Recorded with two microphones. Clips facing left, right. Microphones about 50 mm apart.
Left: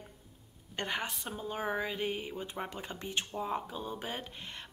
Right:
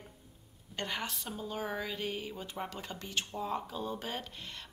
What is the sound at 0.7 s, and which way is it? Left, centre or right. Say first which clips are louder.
A woman's voice: left 2 dB; left.